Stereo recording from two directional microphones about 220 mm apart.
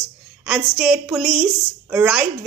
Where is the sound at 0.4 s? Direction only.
5° right (ahead or behind).